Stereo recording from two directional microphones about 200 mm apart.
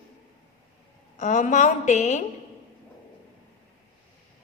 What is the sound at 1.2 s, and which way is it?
A woman's voice, 35° left (ahead or behind).